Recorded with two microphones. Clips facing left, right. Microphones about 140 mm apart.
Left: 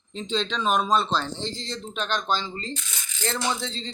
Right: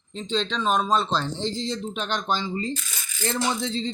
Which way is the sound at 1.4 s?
10° right (ahead or behind).